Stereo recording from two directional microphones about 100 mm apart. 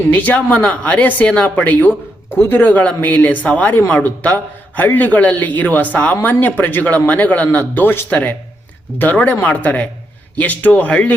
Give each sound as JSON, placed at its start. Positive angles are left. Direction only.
{"t": 0.1, "sound": "a man's voice", "side_deg": 15}